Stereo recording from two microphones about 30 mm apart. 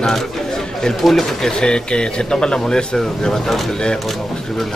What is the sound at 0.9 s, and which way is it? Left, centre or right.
Speech, centre.